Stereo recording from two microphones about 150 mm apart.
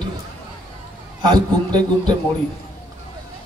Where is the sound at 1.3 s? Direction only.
30° right (ahead or behind).